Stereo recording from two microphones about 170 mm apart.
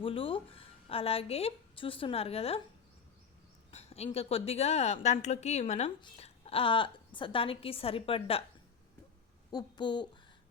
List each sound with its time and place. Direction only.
0.0 s a woman's voice: 30° left (ahead or behind)
3.7 s a woman's voice: 40° left (ahead or behind)
9.5 s speech: 25° left (ahead or behind)